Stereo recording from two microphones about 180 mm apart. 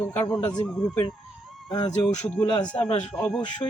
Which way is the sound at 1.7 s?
25° left (ahead or behind).